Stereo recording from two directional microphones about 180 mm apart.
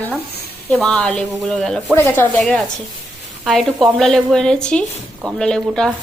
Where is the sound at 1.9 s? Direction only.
10° left (ahead or behind).